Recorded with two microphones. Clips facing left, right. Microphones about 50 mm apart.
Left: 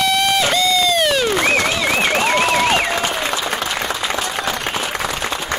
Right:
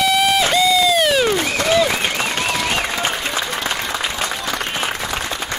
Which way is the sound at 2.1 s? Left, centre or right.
Left.